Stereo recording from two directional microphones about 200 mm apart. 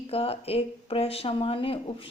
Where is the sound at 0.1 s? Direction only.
30° left (ahead or behind).